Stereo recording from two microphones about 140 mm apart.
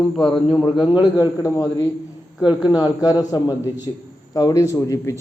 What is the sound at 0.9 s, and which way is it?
Speech, 30° left (ahead or behind).